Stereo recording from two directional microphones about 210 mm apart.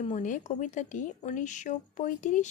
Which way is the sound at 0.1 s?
35° left (ahead or behind).